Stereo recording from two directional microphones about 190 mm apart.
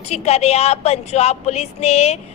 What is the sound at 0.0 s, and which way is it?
A woman's voice, 35° left (ahead or behind).